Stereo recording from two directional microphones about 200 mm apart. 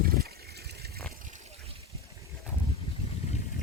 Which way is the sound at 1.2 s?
35° right (ahead or behind).